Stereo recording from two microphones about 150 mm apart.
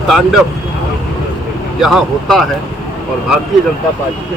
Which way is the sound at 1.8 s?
Centre (ahead or behind).